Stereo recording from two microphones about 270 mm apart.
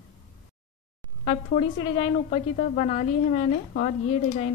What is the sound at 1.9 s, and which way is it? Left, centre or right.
A woman's voice, centre.